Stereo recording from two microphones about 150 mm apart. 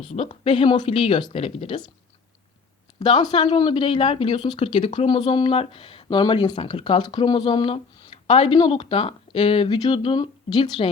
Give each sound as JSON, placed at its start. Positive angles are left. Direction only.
{"t": 0.3, "sound": "speech", "side_deg": 35}
{"t": 3.0, "sound": "speech", "side_deg": 30}